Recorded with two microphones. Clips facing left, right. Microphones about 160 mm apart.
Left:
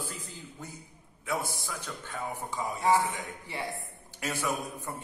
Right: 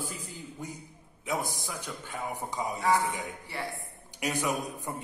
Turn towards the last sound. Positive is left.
turn(degrees=-15)  # may be behind; listen again after turning